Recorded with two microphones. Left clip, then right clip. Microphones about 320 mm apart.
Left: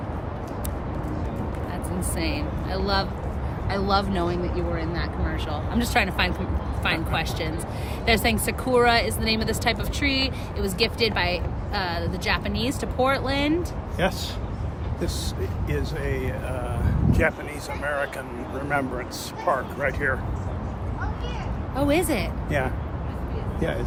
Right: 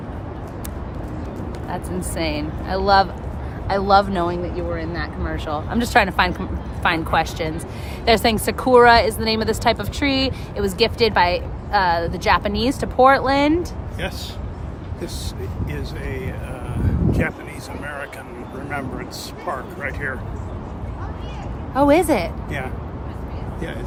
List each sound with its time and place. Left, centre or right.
1.7 s a woman's voice: centre
14.0 s speech: centre
15.7 s speech: centre
21.8 s a woman's voice: centre